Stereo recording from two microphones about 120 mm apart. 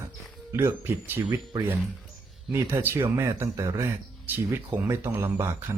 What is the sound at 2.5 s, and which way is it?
Speech, 20° right (ahead or behind).